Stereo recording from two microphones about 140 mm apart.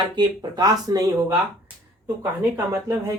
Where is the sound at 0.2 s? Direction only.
30° right (ahead or behind).